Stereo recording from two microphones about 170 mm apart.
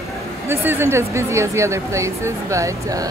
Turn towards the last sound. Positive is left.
turn(degrees=-20)  # may be behind; listen again after turning